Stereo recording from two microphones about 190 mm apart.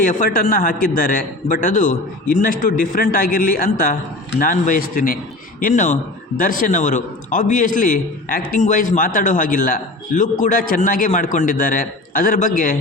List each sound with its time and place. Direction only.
0.0 s a man's voice: 45° left (ahead or behind)